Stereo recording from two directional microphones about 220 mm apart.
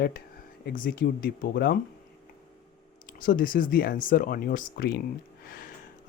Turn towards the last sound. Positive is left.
turn(degrees=45)  # may be behind; listen again after turning